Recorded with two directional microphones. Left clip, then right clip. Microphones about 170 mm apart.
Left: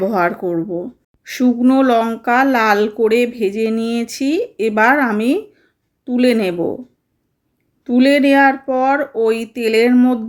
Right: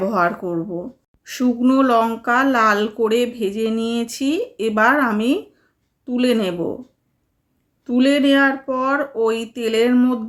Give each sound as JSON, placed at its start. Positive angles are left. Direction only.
{"t": 0.0, "sound": "a woman's voice", "side_deg": 20}
{"t": 7.9, "sound": "speech", "side_deg": 20}